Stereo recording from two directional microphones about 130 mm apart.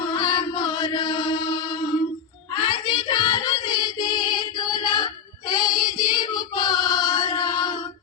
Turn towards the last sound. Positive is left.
turn(degrees=30)  # may be behind; listen again after turning